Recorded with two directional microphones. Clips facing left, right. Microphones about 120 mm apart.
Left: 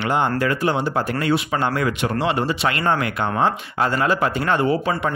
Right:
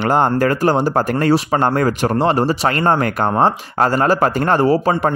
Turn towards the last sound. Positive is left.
turn(degrees=-40)  # may be behind; listen again after turning